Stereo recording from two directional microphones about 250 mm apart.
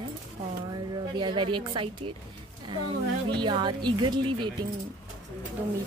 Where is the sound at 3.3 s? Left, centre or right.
Centre.